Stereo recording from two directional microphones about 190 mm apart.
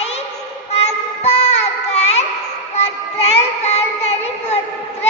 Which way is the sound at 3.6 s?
35° left (ahead or behind).